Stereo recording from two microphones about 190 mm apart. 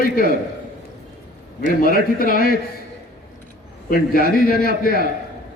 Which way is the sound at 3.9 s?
50° left (ahead or behind).